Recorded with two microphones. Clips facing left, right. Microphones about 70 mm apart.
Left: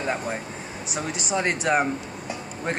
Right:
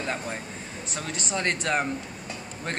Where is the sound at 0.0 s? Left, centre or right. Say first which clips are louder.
Left 4 dB; centre.